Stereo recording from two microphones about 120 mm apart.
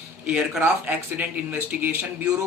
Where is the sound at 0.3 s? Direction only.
5° right (ahead or behind).